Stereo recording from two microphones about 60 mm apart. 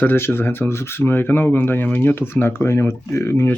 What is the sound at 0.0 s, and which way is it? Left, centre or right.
Speech, left.